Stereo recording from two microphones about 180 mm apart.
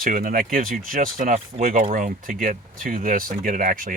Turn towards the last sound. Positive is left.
turn(degrees=-50)  # may be behind; listen again after turning